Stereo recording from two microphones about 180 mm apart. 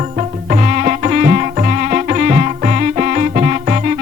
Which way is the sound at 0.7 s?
50° right (ahead or behind).